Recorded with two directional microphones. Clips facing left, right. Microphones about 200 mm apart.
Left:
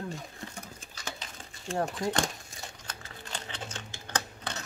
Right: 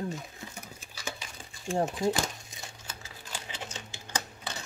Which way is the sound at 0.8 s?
10° right (ahead or behind).